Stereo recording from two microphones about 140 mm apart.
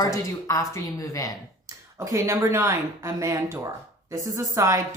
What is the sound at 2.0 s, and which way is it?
Speech, 20° right (ahead or behind).